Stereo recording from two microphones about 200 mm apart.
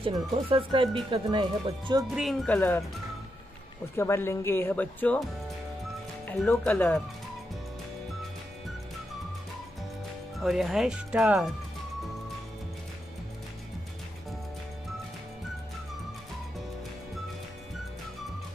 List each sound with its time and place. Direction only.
0.0 s speech: 25° right (ahead or behind)
2.0 s speech: centre (ahead or behind)
3.9 s speech: 10° left (ahead or behind)
6.2 s speech: 5° left (ahead or behind)
10.4 s speech: centre (ahead or behind)